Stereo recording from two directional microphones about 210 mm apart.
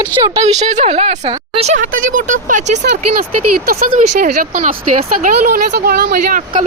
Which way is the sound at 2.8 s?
50° right (ahead or behind).